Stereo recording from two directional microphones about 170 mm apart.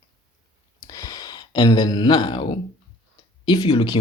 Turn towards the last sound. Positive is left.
turn(degrees=25)  # may be behind; listen again after turning